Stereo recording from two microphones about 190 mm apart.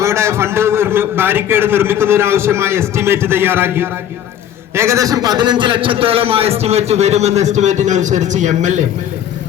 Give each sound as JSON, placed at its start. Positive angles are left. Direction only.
{"t": 0.0, "sound": "a man's voice", "side_deg": -15}